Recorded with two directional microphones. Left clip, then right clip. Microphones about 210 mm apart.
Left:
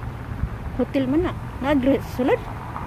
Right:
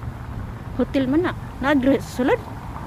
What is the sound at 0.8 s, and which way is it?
Speech, 10° right (ahead or behind).